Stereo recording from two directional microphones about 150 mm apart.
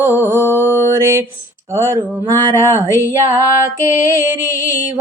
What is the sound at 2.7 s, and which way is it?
Music, 15° right (ahead or behind).